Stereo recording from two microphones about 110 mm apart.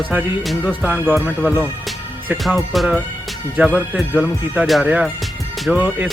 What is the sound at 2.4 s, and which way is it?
Speech, centre (ahead or behind).